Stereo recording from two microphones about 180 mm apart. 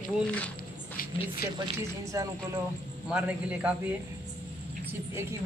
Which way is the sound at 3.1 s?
5° right (ahead or behind).